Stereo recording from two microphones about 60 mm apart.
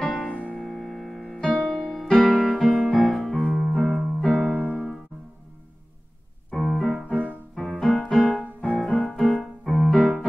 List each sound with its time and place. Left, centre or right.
0.0 s music: centre
6.5 s keyboard: centre
7.0 s music: centre
7.5 s music: centre
8.7 s keyboard: centre